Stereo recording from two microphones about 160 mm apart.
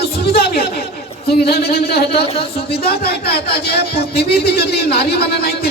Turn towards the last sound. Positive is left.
turn(degrees=80)